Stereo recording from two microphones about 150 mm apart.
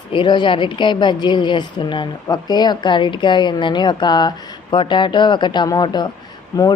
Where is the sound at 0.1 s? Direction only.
30° left (ahead or behind).